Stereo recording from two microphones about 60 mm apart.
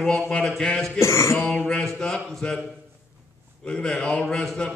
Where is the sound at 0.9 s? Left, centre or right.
Left.